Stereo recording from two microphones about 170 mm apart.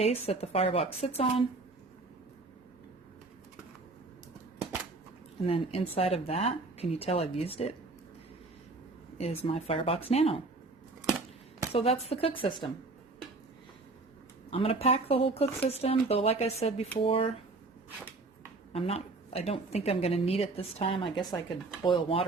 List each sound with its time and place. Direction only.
0.0 s a woman's voice: 40° left (ahead or behind)
5.4 s a woman's voice: 35° left (ahead or behind)
9.1 s a woman's voice: 35° left (ahead or behind)
11.7 s a woman's voice: 35° left (ahead or behind)
14.5 s a woman's voice: 35° left (ahead or behind)
18.7 s a woman's voice: 35° left (ahead or behind)